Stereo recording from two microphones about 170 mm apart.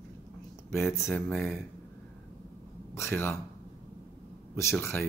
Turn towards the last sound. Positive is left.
turn(degrees=15)  # may be behind; listen again after turning